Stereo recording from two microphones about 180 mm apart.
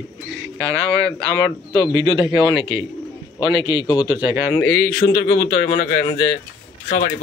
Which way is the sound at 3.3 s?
25° left (ahead or behind).